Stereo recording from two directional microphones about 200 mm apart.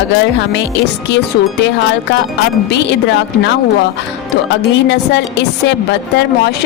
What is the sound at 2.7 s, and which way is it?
Speech, 60° left (ahead or behind).